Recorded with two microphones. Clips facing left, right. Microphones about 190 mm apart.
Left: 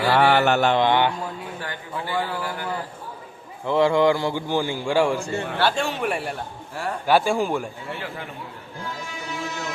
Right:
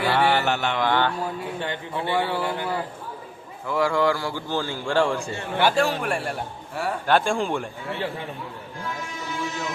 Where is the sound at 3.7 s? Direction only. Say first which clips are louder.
Left 4 dB; 25° left (ahead or behind); by 7.9 s 5° left (ahead or behind).